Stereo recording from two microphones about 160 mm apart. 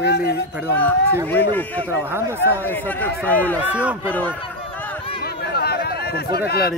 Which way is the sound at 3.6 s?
10° right (ahead or behind).